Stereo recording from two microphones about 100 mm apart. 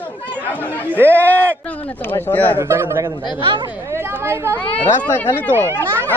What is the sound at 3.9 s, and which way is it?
Speech, 25° right (ahead or behind).